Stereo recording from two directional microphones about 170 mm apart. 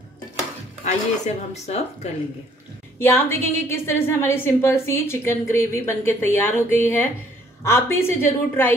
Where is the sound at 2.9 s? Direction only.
15° left (ahead or behind).